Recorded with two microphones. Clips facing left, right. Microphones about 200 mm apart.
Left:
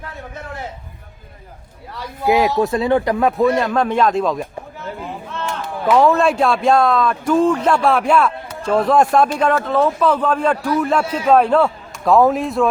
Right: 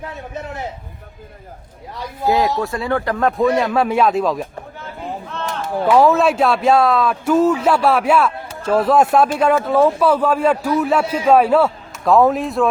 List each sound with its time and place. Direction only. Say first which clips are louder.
2.2 s speech: left 2 dB; 15° left (ahead or behind); by 4.4 s 5° right (ahead or behind)
6.0 s a man's voice: even; 5° right (ahead or behind)